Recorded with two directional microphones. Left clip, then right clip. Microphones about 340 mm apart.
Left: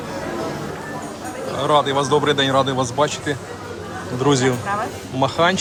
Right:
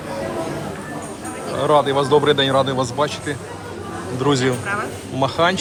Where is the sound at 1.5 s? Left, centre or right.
Centre.